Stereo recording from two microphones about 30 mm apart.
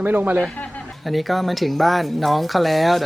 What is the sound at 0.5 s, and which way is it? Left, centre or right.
Chuckle, left.